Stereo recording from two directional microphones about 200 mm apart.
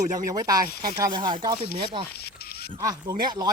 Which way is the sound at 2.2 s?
50° left (ahead or behind).